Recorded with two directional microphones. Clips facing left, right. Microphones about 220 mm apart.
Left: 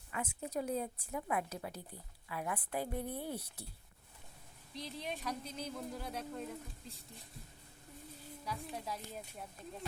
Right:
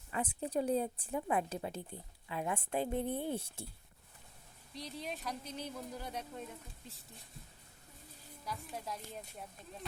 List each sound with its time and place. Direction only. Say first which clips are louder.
0.1 s a woman's voice: right 4 dB; 30° right (ahead or behind)
4.7 s speech: even; centre (ahead or behind)
8.4 s speech: even; centre (ahead or behind)